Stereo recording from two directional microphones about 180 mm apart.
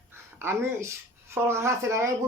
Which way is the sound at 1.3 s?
15° right (ahead or behind).